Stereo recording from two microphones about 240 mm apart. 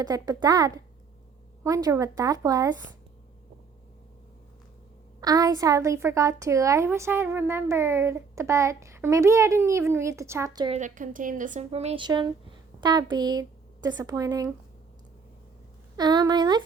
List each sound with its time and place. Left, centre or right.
0.0 s a woman's voice: centre
5.2 s a woman's voice: centre
10.8 s a woman's voice: right; by 14.5 s centre
16.0 s a woman's voice: centre